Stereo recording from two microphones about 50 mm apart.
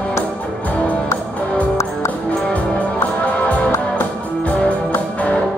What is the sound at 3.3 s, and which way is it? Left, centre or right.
Music, left.